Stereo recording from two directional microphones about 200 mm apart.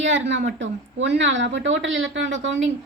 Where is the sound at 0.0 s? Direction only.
65° right (ahead or behind).